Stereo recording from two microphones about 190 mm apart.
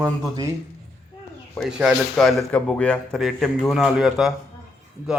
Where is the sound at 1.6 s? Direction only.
5° right (ahead or behind).